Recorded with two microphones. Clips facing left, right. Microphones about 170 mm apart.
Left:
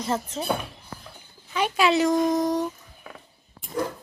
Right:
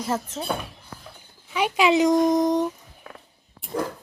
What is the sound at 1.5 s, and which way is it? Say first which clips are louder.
Speech: right 2 dB; 15° right (ahead or behind).